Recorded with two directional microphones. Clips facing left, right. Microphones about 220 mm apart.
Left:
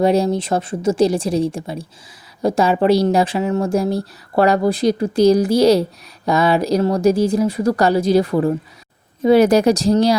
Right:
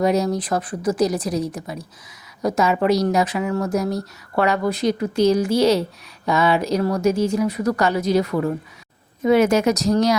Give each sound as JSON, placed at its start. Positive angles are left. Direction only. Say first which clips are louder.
{"t": 0.0, "sound": "a woman's voice", "louder": "left 4 dB", "side_deg": 30}